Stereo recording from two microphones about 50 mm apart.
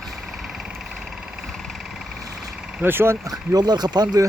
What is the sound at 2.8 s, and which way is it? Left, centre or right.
Speech, right.